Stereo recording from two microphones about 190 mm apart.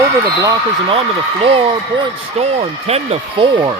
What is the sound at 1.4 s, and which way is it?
Speech, 25° right (ahead or behind).